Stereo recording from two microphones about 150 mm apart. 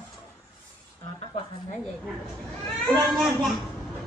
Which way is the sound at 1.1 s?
40° left (ahead or behind).